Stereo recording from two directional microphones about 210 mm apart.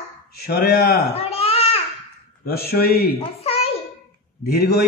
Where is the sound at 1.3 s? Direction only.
30° left (ahead or behind).